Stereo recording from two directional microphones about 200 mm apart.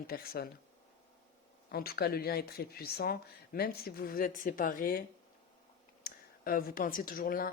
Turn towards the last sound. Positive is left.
turn(degrees=45)  # may be behind; listen again after turning